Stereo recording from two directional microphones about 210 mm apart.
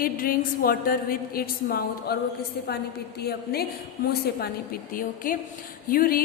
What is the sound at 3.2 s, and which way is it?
Speech, 50° left (ahead or behind).